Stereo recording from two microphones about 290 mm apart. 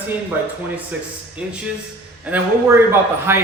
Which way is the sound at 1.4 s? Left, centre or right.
Centre.